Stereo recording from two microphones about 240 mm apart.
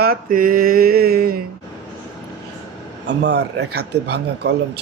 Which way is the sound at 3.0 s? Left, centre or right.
Right.